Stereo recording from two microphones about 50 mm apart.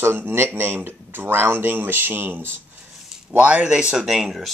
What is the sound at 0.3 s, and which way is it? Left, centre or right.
Speech, right.